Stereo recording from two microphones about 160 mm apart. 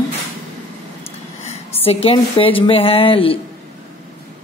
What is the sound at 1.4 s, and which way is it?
Speech, 40° left (ahead or behind).